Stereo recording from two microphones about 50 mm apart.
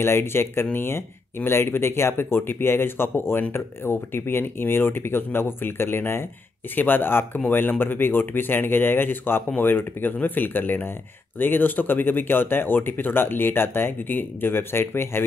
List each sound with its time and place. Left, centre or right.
0.0 s speech: left
6.7 s speech: left